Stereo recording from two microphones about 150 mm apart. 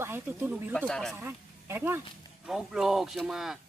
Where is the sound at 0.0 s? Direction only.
15° right (ahead or behind).